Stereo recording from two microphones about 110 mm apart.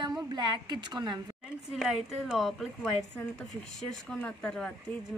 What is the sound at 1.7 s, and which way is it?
A woman's voice, centre (ahead or behind).